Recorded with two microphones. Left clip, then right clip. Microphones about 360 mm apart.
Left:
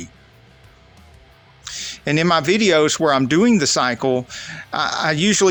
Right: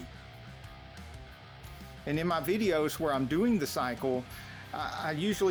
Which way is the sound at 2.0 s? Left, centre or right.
Right.